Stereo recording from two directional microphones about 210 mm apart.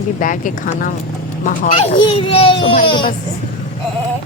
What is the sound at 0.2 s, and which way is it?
Speech, 40° left (ahead or behind).